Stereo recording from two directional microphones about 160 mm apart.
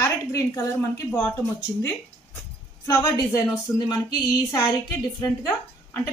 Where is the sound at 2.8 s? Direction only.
20° left (ahead or behind).